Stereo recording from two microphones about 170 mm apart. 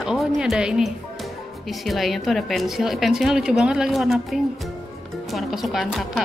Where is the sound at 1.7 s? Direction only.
Centre (ahead or behind).